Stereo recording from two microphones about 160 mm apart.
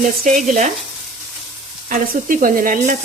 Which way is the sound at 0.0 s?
50° right (ahead or behind).